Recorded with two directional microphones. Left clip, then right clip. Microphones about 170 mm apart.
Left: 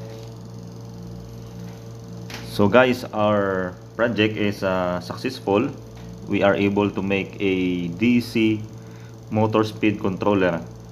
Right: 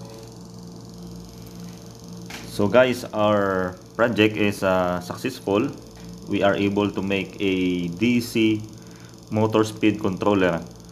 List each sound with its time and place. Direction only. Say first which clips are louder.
2.5 s speech: left 1 dB; 15° left (ahead or behind)
3.2 s a man's voice: right 1 dB; 10° right (ahead or behind)